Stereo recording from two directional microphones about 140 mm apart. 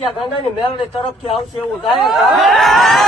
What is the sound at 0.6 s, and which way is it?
Speech, 40° left (ahead or behind).